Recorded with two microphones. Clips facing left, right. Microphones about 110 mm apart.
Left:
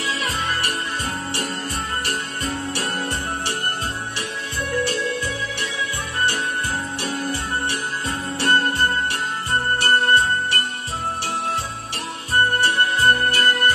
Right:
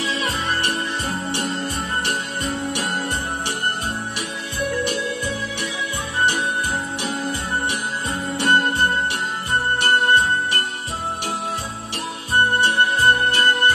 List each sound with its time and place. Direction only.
0.0 s music: 25° right (ahead or behind)
6.1 s jingle bell: 20° right (ahead or behind)
7.0 s music: 15° right (ahead or behind)
12.4 s music: 20° right (ahead or behind)